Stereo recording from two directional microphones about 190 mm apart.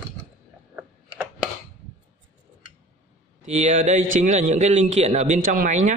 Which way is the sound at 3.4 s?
40° right (ahead or behind).